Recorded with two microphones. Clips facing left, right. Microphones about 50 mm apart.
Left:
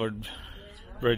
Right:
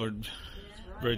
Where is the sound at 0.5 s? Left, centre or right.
Centre.